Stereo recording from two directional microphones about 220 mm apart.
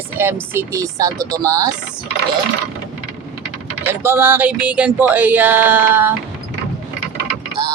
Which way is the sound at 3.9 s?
10° right (ahead or behind).